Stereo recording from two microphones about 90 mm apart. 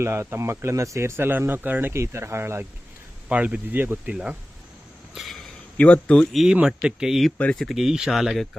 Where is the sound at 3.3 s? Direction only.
15° right (ahead or behind).